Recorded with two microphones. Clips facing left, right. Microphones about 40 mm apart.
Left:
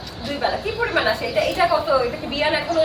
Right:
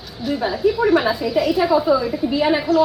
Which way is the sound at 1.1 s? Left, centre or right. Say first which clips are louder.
Right 3 dB; left.